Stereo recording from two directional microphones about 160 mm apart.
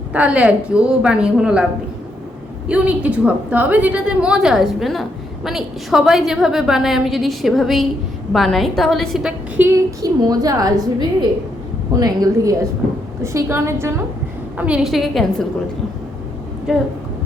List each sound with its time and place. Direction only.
0.1 s a woman's voice: 10° right (ahead or behind)
2.6 s a woman's voice: 5° right (ahead or behind)
9.6 s a woman's voice: 25° right (ahead or behind)
11.9 s a woman's voice: 25° right (ahead or behind)
14.6 s a woman's voice: 5° right (ahead or behind)
16.7 s a woman's voice: centre (ahead or behind)